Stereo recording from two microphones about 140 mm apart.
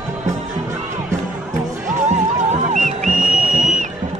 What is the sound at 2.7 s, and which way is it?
Music, 65° right (ahead or behind).